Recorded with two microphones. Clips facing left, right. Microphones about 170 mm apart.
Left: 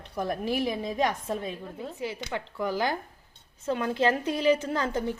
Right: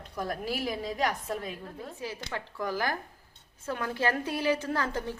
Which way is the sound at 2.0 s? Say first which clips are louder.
Left 4 dB; 15° left (ahead or behind).